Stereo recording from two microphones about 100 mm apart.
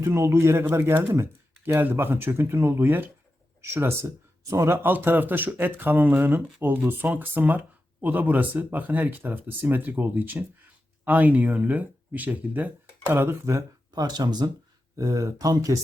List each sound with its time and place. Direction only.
0.0 s speech: 30° right (ahead or behind)
14.0 s speech: 45° right (ahead or behind)